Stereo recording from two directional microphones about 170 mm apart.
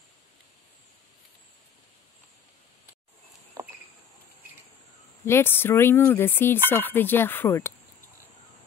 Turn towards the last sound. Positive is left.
turn(degrees=15)  # may be behind; listen again after turning